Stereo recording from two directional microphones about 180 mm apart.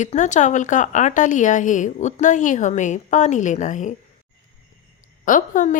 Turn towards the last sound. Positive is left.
turn(degrees=45)  # may be behind; listen again after turning